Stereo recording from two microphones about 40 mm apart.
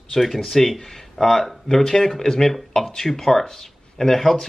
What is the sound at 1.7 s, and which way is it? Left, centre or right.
Speech, centre.